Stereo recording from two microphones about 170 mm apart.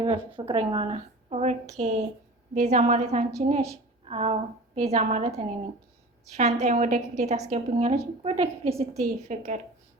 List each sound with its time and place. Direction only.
0.0 s a woman's voice: 30° right (ahead or behind)
6.3 s a woman's voice: 40° right (ahead or behind)